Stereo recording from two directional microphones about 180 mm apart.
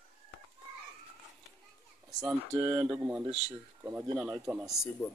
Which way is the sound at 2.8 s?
20° right (ahead or behind).